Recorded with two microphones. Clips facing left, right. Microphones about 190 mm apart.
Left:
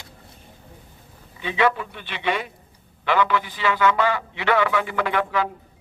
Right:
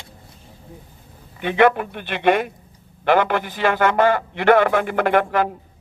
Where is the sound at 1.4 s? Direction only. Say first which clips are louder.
Right 6 dB; 55° right (ahead or behind).